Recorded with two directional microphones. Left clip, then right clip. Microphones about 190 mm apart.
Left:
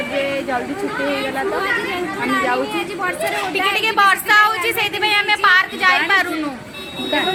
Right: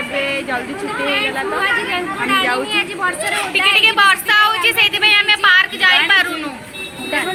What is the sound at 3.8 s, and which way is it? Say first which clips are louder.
Child singing: right 2 dB; 35° left (ahead or behind).